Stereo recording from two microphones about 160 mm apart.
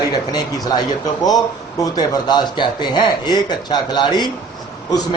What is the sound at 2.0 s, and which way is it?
A man's voice, 25° left (ahead or behind).